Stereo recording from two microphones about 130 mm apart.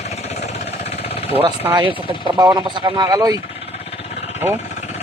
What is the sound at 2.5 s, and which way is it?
Speech, 30° right (ahead or behind).